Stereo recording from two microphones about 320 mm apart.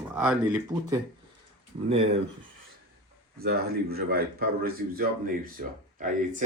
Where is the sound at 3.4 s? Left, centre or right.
Right.